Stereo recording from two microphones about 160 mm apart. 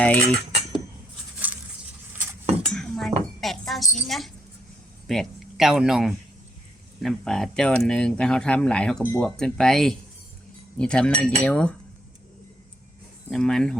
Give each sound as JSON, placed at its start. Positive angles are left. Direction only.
{"t": 0.0, "sound": "cutlery", "side_deg": 10}
{"t": 1.5, "sound": "a sound", "side_deg": -10}
{"t": 2.6, "sound": "dishes", "side_deg": 5}
{"t": 3.4, "sound": "a sound", "side_deg": 0}
{"t": 5.0, "sound": "speech", "side_deg": 0}
{"t": 13.3, "sound": "speech", "side_deg": 5}